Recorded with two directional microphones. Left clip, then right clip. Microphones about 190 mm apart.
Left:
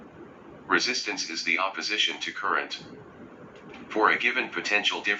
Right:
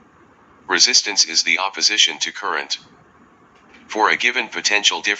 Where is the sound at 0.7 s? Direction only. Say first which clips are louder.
Right 9 dB; 40° right (ahead or behind).